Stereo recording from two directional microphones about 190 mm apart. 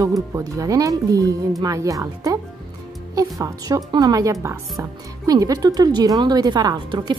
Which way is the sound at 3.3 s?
20° right (ahead or behind).